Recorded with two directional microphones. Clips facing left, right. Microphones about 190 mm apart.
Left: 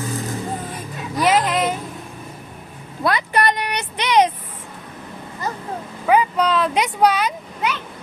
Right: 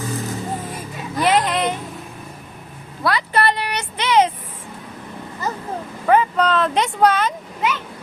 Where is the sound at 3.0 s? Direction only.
20° left (ahead or behind).